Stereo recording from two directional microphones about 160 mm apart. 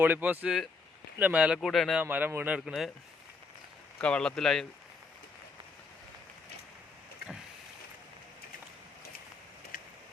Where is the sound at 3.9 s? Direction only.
5° left (ahead or behind).